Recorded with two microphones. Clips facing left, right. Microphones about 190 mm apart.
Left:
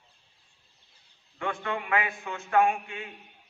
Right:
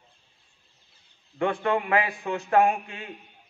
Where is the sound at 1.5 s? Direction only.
35° right (ahead or behind).